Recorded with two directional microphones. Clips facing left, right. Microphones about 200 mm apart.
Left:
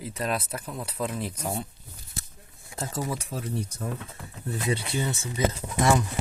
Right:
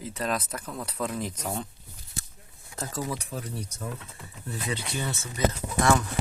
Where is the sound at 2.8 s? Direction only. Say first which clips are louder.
Left 1 dB; 25° left (ahead or behind).